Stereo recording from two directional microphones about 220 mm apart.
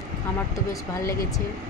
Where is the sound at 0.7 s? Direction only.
15° left (ahead or behind).